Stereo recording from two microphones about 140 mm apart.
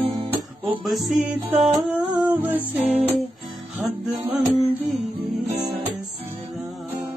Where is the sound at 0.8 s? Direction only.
5° right (ahead or behind).